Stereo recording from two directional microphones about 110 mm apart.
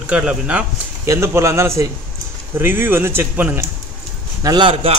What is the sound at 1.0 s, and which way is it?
Speech, 25° right (ahead or behind).